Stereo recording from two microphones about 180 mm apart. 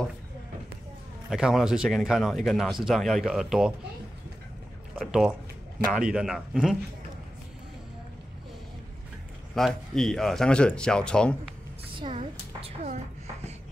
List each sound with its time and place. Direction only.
1.3 s speech: 5° right (ahead or behind)
4.9 s speech: 5° right (ahead or behind)
9.6 s speech: centre (ahead or behind)
11.9 s a woman's voice: 30° right (ahead or behind)